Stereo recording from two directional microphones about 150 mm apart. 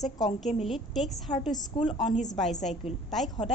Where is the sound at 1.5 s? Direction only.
35° left (ahead or behind).